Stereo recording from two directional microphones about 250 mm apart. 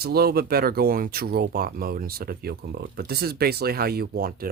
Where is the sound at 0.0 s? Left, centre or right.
Right.